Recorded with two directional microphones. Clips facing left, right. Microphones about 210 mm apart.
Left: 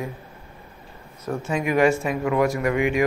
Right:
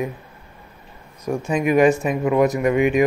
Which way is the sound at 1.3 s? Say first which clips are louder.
Right 4 dB; 15° right (ahead or behind).